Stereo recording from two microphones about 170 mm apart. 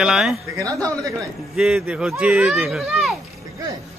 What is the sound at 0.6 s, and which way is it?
Speech, 20° right (ahead or behind).